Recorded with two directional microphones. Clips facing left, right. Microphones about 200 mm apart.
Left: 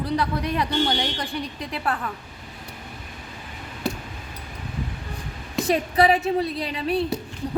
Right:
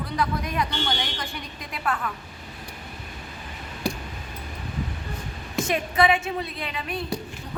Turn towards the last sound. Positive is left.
turn(degrees=35)  # may be behind; listen again after turning